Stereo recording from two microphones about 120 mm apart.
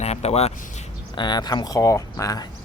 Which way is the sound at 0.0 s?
60° left (ahead or behind).